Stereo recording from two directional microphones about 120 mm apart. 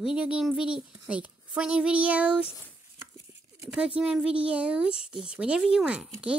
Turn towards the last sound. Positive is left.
turn(degrees=-10)  # may be behind; listen again after turning